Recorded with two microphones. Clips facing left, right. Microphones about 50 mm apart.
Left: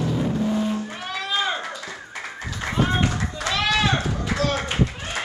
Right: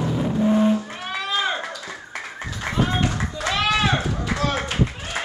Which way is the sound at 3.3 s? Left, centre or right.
Centre.